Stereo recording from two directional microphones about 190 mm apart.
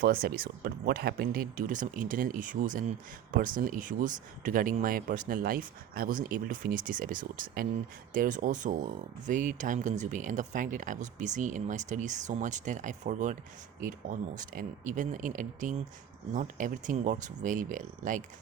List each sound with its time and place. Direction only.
0.0 s speech: 50° right (ahead or behind)